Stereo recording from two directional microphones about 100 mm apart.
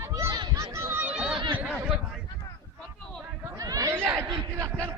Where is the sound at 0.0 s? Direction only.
30° right (ahead or behind).